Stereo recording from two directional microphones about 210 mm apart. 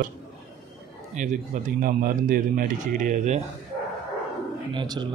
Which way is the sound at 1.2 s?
35° right (ahead or behind).